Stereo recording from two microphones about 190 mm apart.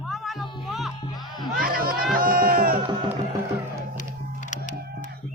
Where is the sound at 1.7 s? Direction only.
50° right (ahead or behind).